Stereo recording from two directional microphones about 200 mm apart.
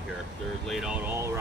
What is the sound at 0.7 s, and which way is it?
Speech, 5° right (ahead or behind).